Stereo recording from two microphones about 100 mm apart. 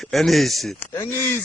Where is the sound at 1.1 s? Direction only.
25° left (ahead or behind).